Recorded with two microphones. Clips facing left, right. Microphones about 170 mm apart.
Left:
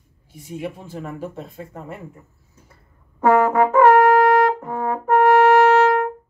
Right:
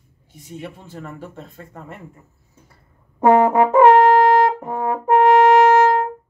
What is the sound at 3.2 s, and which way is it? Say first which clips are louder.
Brass instrument: right 2 dB; 20° right (ahead or behind).